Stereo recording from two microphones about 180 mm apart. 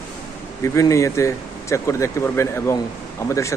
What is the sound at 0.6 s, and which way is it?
Speech, 15° left (ahead or behind).